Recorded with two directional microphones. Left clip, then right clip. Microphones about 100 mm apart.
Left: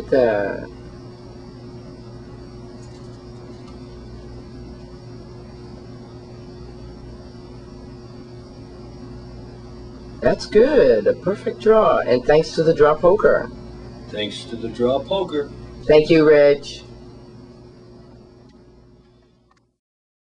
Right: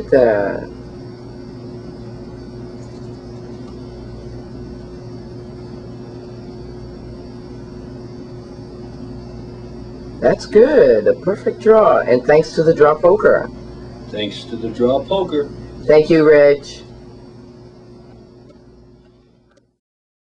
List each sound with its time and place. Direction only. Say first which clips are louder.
0.1 s speech: right 4 dB; 5° left (ahead or behind)
10.2 s speech: right 4 dB; 5° left (ahead or behind)